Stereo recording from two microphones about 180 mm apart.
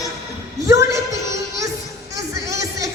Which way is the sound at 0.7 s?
15° right (ahead or behind).